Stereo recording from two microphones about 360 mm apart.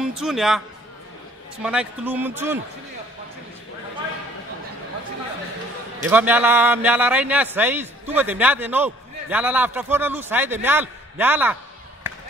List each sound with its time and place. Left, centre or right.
0.0 s speech: centre
1.6 s a man's voice: centre
6.0 s a man's voice: centre